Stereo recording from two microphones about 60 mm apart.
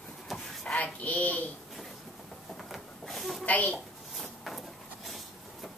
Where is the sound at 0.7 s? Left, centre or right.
Left.